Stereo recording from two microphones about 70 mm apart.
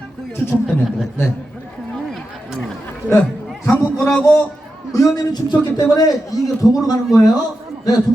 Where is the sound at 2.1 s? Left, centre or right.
Centre.